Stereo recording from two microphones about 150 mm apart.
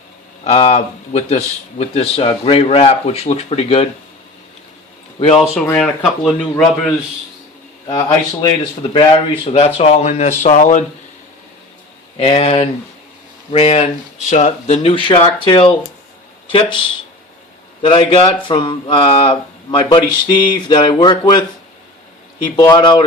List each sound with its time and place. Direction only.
0.4 s speech: 40° left (ahead or behind)
5.7 s speech: 5° left (ahead or behind)
7.9 s speech: 30° left (ahead or behind); by 10.8 s 55° left (ahead or behind)
12.1 s speech: 45° left (ahead or behind)
17.8 s speech: 40° left (ahead or behind)
22.7 s speech: 30° left (ahead or behind)